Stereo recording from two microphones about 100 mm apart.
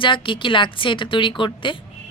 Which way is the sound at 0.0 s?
55° left (ahead or behind).